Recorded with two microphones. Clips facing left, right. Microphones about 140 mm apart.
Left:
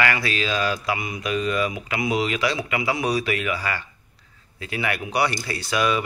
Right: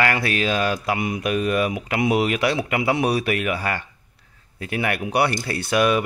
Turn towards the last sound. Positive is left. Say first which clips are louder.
# right 4 dB
turn(degrees=-55)  # may be behind; listen again after turning